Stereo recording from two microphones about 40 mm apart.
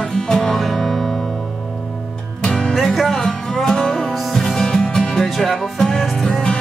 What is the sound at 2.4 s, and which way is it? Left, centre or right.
Music, left.